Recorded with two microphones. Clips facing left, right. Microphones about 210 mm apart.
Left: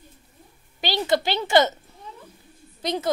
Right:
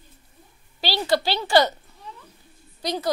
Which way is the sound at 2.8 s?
25° left (ahead or behind).